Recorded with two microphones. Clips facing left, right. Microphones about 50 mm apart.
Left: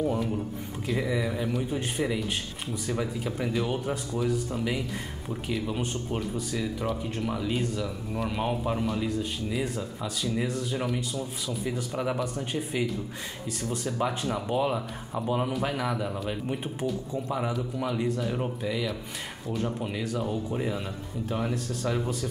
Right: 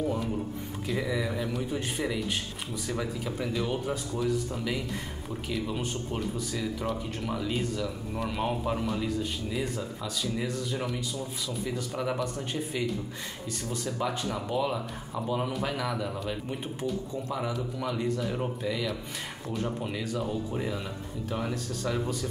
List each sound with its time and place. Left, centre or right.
0.0 s speech: centre
13.7 s speech: left
17.7 s speech: centre